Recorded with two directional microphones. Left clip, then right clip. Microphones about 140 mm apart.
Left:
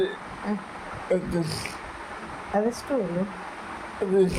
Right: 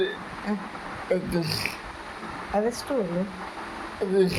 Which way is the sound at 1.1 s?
10° left (ahead or behind).